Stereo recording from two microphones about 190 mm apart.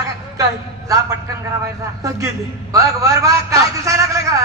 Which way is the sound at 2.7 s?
15° right (ahead or behind).